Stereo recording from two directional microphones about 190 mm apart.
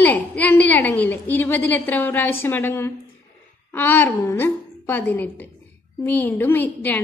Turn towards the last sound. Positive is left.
turn(degrees=10)  # may be behind; listen again after turning